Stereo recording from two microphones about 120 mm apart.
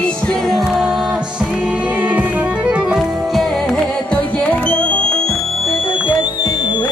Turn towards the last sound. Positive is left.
turn(degrees=35)  # may be behind; listen again after turning